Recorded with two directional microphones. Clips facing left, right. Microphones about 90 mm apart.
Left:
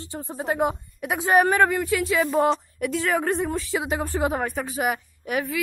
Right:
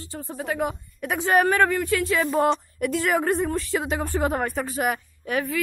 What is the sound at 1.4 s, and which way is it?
Speech, 20° left (ahead or behind).